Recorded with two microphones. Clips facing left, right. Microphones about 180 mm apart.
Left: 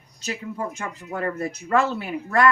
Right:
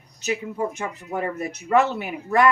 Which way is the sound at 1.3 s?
20° right (ahead or behind).